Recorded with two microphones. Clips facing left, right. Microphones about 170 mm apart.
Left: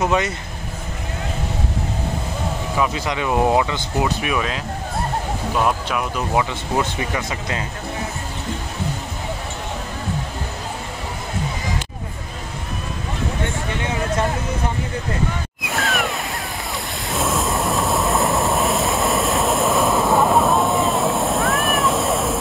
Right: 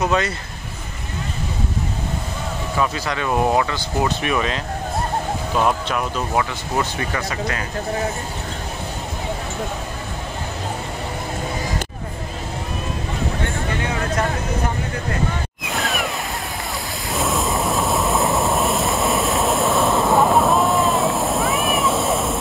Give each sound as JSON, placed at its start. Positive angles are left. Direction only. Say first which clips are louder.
{"t": 0.0, "sound": "speech", "louder": "even", "side_deg": 20}
{"t": 2.8, "sound": "speech", "louder": "left 1 dB", "side_deg": 15}
{"t": 4.0, "sound": "speech", "louder": "right 1 dB", "side_deg": 5}
{"t": 5.7, "sound": "speech", "louder": "right 1 dB", "side_deg": 5}
{"t": 7.0, "sound": "speech", "louder": "right 1 dB", "side_deg": 20}
{"t": 15.7, "sound": "a sound", "louder": "left 1 dB", "side_deg": 0}
{"t": 17.1, "sound": "vehicle", "louder": "even", "side_deg": 0}